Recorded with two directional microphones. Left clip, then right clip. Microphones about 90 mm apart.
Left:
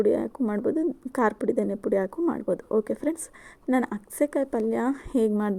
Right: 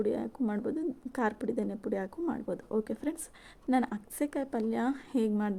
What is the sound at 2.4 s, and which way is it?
Speech, 40° left (ahead or behind).